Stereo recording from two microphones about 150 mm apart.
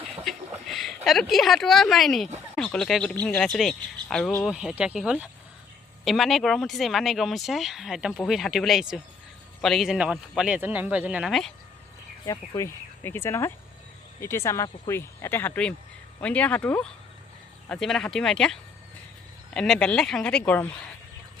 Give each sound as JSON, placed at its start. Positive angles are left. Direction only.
{"t": 0.3, "sound": "a sound", "side_deg": 0}
{"t": 1.0, "sound": "speech", "side_deg": 0}
{"t": 4.5, "sound": "speech", "side_deg": -5}
{"t": 12.2, "sound": "speech", "side_deg": 20}
{"t": 19.5, "sound": "speech", "side_deg": 5}